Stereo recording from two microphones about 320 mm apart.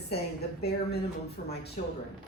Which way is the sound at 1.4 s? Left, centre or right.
Left.